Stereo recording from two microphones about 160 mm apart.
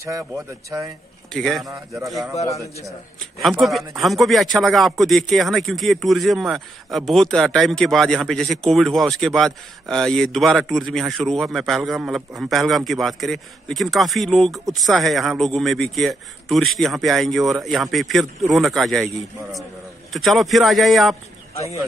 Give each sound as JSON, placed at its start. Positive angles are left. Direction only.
{"t": 0.7, "sound": "speech", "side_deg": -20}
{"t": 1.3, "sound": "a man's voice", "side_deg": 5}
{"t": 2.3, "sound": "a man's voice", "side_deg": 40}
{"t": 2.6, "sound": "speech", "side_deg": -20}
{"t": 3.4, "sound": "a man's voice", "side_deg": 0}